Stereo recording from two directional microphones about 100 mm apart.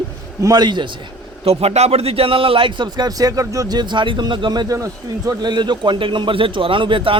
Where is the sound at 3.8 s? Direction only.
50° right (ahead or behind).